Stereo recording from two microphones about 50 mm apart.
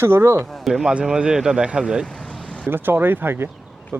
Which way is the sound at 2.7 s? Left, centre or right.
Right.